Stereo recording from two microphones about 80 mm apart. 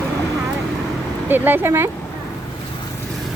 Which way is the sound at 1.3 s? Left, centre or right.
Right.